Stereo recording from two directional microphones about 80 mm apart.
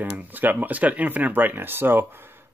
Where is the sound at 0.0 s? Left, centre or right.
Right.